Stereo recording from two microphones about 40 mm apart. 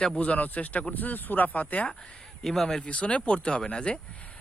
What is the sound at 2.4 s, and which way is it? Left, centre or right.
Speech, centre.